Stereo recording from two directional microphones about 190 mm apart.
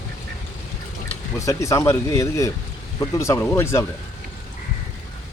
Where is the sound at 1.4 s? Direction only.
15° left (ahead or behind).